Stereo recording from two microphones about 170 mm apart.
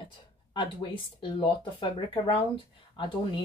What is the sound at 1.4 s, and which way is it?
Speech, 30° left (ahead or behind).